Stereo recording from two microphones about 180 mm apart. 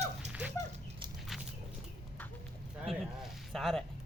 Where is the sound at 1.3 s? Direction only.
Centre (ahead or behind).